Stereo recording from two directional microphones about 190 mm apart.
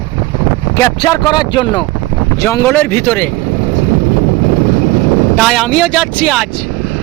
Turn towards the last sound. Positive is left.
turn(degrees=0)  # may be behind; listen again after turning